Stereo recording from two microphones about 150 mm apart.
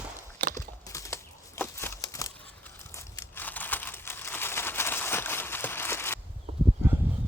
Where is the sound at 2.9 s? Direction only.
15° left (ahead or behind).